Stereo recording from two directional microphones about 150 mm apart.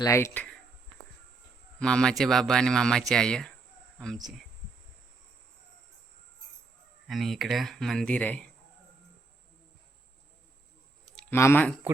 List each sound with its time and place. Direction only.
0.0 s speech: 20° left (ahead or behind)
1.8 s speech: 5° left (ahead or behind)
7.1 s speech: centre (ahead or behind)
11.0 s clicking: 5° left (ahead or behind)
11.3 s speech: 15° left (ahead or behind)